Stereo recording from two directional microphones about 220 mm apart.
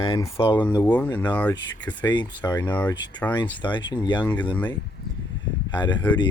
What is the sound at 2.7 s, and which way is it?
Speech, 5° left (ahead or behind).